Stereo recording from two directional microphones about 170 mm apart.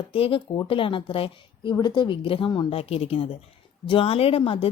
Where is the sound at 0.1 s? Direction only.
30° left (ahead or behind).